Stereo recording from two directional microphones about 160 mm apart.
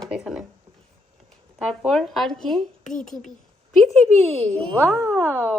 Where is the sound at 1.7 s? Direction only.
Centre (ahead or behind).